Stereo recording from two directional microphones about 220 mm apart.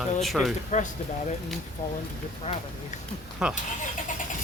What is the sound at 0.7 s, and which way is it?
Speech, 35° left (ahead or behind).